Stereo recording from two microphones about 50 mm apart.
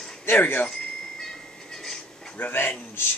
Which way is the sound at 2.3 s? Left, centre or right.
Left.